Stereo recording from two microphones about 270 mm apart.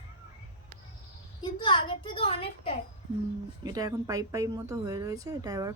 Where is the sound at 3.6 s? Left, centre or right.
Centre.